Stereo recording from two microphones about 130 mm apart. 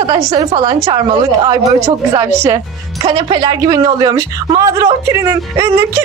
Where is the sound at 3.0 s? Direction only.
40° right (ahead or behind); by 6.0 s 20° right (ahead or behind).